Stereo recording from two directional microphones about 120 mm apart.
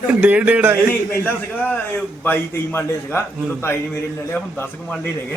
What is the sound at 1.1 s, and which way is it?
A man's voice, 15° left (ahead or behind).